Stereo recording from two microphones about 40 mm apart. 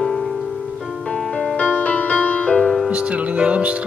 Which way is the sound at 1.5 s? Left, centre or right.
Left.